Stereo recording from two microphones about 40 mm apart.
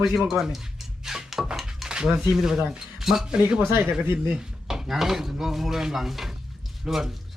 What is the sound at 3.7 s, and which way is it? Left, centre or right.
Speech, right.